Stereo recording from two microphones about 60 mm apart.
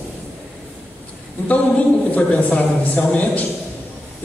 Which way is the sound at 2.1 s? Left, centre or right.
Left.